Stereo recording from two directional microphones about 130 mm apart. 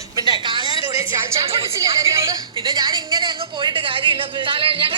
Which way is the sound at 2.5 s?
35° right (ahead or behind).